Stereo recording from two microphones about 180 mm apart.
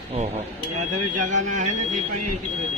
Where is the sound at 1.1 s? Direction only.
45° right (ahead or behind).